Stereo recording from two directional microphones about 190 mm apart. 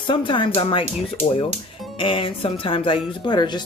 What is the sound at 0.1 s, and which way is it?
Speech, 25° left (ahead or behind).